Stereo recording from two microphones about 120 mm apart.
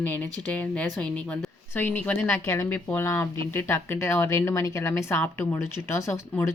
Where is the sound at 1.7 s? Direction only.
20° left (ahead or behind).